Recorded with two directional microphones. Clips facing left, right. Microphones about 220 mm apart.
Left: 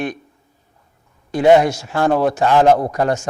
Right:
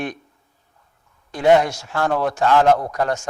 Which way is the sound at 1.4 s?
10° left (ahead or behind).